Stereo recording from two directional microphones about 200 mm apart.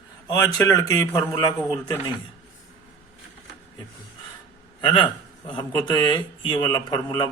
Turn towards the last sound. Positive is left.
turn(degrees=25)  # may be behind; listen again after turning